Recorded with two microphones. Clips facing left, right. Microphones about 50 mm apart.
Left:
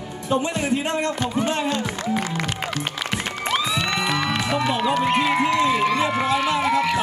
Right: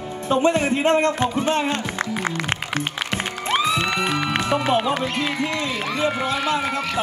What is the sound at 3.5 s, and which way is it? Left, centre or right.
Music, right.